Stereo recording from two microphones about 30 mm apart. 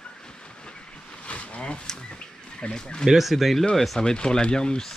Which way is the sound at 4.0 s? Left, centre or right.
Left.